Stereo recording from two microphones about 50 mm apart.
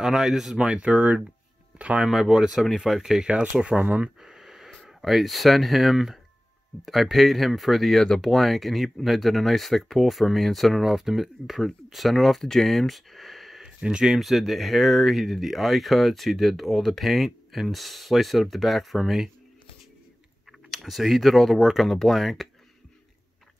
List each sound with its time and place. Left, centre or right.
0.0 s speech: centre; by 2.0 s right
2.0 s speech: centre
3.8 s speech: right
4.2 s a sound: centre
4.8 s speech: centre
10.9 s speech: centre
13.7 s speech: centre
20.7 s speech: centre